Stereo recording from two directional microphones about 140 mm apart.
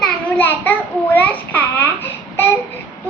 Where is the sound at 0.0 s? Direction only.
15° left (ahead or behind).